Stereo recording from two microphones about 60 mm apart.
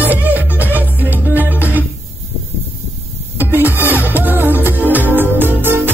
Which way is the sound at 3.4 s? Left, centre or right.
Right.